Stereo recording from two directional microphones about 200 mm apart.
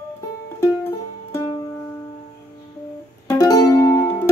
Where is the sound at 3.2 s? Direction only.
15° left (ahead or behind).